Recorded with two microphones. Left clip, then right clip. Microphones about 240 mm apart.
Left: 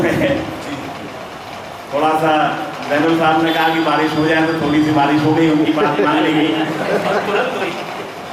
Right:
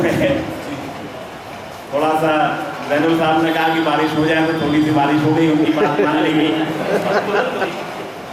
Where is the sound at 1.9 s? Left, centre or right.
Centre.